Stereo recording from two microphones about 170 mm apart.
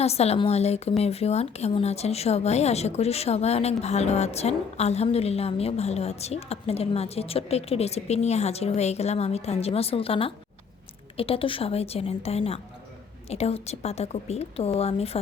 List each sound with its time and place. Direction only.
0.0 s a woman's voice: 35° left (ahead or behind)